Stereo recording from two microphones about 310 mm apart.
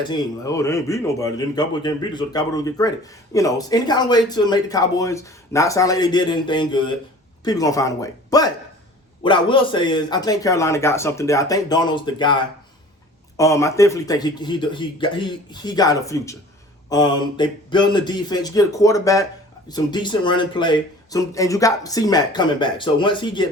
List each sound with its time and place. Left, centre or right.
0.0 s speech: centre